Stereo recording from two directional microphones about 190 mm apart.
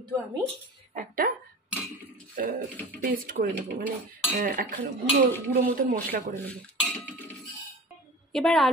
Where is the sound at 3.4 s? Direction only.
45° right (ahead or behind).